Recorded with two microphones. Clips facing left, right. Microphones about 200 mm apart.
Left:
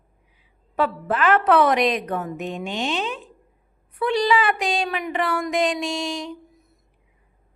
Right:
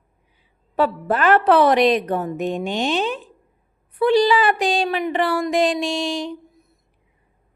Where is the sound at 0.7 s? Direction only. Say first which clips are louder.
Right 3 dB; 35° right (ahead or behind).